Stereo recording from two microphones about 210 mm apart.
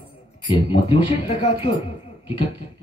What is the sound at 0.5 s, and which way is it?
Speech, 25° left (ahead or behind).